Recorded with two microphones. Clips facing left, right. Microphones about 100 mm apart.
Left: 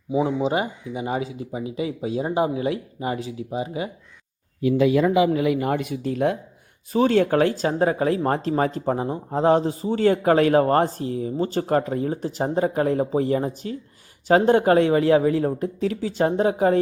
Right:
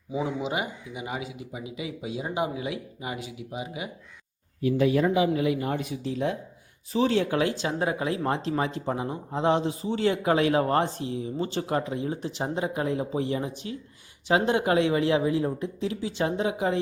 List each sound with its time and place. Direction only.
0.3 s speech: 35° left (ahead or behind)
4.6 s a man's voice: 90° left; by 16.8 s 45° left (ahead or behind)